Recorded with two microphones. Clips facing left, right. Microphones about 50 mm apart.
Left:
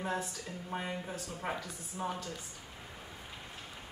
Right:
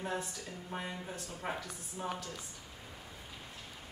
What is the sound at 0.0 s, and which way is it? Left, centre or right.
A woman's voice, centre.